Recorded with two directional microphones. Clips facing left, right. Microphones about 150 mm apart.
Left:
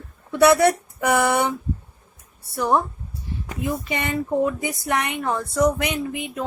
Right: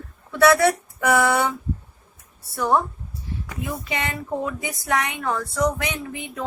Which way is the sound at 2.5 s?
20° left (ahead or behind).